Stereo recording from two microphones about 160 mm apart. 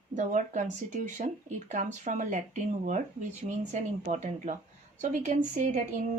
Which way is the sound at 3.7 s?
50° right (ahead or behind).